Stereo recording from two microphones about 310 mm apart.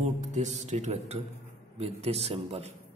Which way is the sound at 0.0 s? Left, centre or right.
Right.